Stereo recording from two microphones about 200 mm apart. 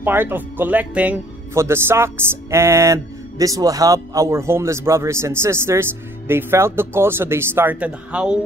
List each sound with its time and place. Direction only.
0.0 s speech: 10° right (ahead or behind)